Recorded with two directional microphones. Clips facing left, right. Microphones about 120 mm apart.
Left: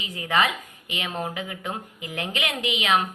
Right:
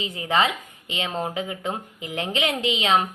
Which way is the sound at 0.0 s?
25° right (ahead or behind).